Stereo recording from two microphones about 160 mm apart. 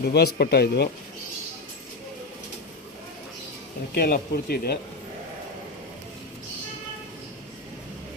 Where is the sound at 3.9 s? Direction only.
75° left (ahead or behind).